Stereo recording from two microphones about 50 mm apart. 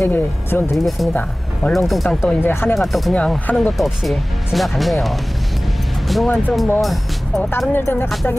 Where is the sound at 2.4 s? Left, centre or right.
Left.